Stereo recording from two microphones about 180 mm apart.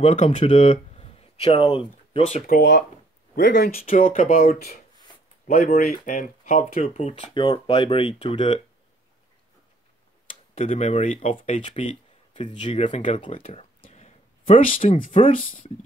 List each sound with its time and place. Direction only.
0.0 s speech: 30° left (ahead or behind)
2.4 s speech: 60° left (ahead or behind)
3.3 s speech: 70° left (ahead or behind); by 8.6 s 30° left (ahead or behind)
10.5 s speech: 35° left (ahead or behind)
11.3 s speech: 30° left (ahead or behind)
13.8 s a sound: 35° left (ahead or behind)
15.0 s speech: 30° left (ahead or behind)